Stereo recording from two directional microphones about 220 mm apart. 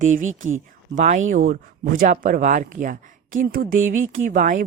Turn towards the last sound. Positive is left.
turn(degrees=-35)  # may be behind; listen again after turning